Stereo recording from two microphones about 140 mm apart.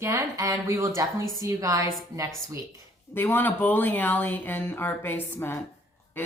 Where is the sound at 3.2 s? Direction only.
15° left (ahead or behind).